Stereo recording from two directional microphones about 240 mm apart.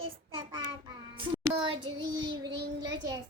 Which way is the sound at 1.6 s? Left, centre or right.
Centre.